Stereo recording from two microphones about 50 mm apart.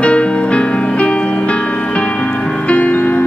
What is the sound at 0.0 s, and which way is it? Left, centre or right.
Music, left.